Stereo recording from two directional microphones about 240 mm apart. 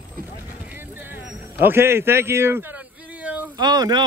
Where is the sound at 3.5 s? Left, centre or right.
Centre.